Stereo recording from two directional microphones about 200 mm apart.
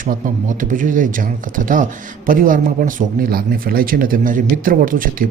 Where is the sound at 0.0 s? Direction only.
45° right (ahead or behind).